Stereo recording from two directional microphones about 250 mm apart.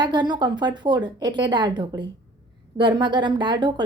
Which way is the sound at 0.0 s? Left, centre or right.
Centre.